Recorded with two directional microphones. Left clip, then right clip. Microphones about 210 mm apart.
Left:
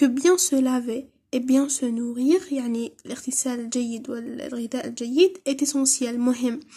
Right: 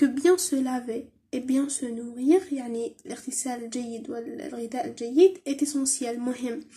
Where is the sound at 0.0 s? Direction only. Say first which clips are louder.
Left 2 dB; 40° left (ahead or behind).